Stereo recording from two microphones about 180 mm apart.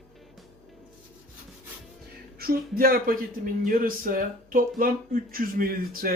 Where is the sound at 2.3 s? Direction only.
55° right (ahead or behind).